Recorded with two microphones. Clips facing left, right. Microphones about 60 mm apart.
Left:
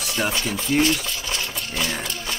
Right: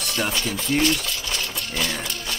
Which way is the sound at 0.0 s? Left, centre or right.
Centre.